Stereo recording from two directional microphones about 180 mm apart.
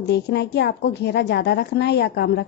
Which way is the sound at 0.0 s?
65° left (ahead or behind).